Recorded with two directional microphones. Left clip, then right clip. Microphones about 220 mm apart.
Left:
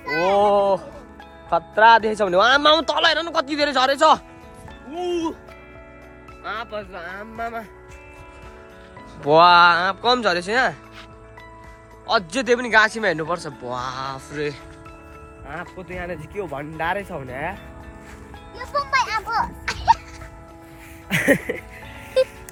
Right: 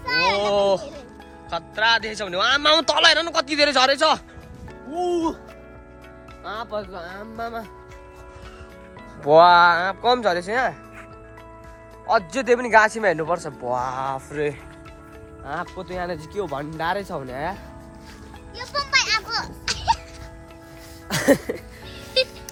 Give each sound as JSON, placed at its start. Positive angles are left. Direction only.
{"t": 0.3, "sound": "a sound", "side_deg": 5}
{"t": 1.5, "sound": "speech", "side_deg": 15}
{"t": 2.6, "sound": "speech", "side_deg": 0}
{"t": 4.9, "sound": "speech", "side_deg": -10}
{"t": 6.4, "sound": "speech", "side_deg": 10}
{"t": 6.7, "sound": "speech", "side_deg": -10}
{"t": 7.0, "sound": "speech", "side_deg": 5}
{"t": 9.2, "sound": "speech", "side_deg": 5}
{"t": 12.0, "sound": "speech", "side_deg": 10}
{"t": 18.5, "sound": "music", "side_deg": 15}
{"t": 19.6, "sound": "music", "side_deg": 35}
{"t": 21.1, "sound": "music", "side_deg": -10}
{"t": 22.2, "sound": "music", "side_deg": 20}